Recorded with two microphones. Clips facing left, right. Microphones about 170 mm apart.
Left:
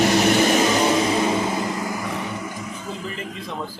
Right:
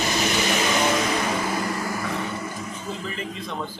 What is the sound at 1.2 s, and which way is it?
Vehicle, 20° left (ahead or behind).